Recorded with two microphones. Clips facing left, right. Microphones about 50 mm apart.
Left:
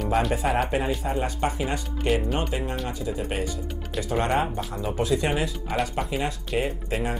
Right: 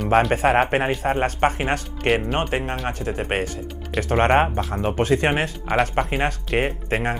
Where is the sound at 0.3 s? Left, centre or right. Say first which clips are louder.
Right 6 dB; right.